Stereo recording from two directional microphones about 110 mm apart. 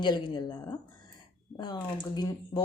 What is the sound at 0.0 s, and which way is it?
Speech, 40° left (ahead or behind).